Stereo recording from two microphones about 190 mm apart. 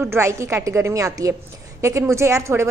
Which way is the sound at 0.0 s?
15° right (ahead or behind).